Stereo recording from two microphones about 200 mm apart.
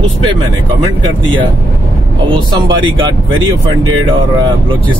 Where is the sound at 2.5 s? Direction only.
20° right (ahead or behind).